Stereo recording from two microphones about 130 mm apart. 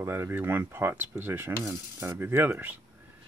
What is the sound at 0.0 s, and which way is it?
Speech, 20° right (ahead or behind).